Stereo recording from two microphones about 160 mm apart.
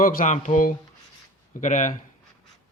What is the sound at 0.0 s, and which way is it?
Speech, 60° left (ahead or behind).